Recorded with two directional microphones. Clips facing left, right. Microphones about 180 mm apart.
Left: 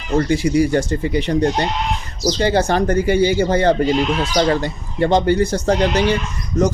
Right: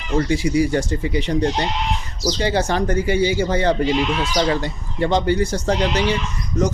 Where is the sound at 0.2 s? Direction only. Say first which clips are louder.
Left 2 dB; 55° left (ahead or behind).